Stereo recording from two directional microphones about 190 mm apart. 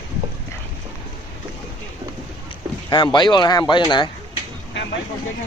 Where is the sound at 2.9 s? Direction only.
20° left (ahead or behind).